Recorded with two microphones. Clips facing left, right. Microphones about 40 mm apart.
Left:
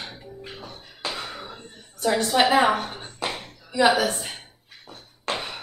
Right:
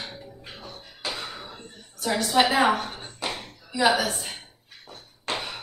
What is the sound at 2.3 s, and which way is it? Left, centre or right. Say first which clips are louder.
Speech: left 1 dB; centre.